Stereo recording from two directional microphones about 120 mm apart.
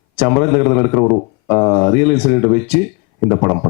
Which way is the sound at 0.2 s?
15° left (ahead or behind).